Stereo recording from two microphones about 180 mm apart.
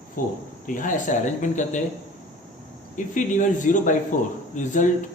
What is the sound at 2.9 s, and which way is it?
A man's voice, 45° left (ahead or behind).